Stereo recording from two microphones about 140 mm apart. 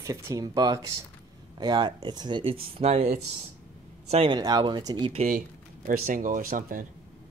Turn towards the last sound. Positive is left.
turn(degrees=-85)